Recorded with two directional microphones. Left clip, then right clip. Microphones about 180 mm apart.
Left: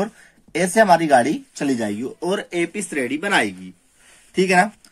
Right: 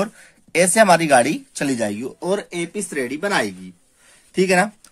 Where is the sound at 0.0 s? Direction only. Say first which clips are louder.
Right 1 dB; 35° right (ahead or behind).